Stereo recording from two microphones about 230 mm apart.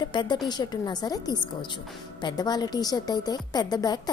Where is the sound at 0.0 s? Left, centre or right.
Centre.